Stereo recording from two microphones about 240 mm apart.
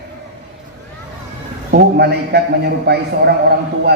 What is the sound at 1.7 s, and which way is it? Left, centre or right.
A man's voice, right.